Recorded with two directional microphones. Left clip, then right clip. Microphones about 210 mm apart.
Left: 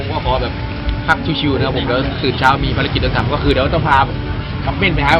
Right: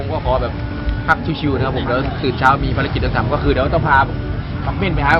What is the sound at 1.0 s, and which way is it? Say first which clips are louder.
Speech: left 1 dB; 10° right (ahead or behind).